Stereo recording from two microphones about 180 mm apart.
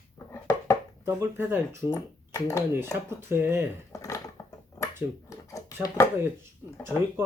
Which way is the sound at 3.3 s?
15° right (ahead or behind).